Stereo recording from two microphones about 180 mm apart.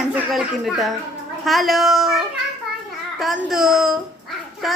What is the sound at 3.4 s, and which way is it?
A man's voice, centre (ahead or behind).